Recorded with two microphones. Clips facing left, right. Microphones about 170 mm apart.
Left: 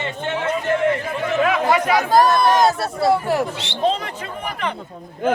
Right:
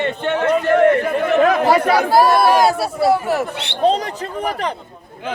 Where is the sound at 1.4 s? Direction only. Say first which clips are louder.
Right 3 dB; 35° right (ahead or behind).